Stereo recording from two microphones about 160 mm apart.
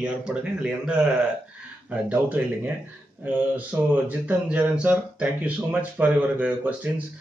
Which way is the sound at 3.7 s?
15° right (ahead or behind).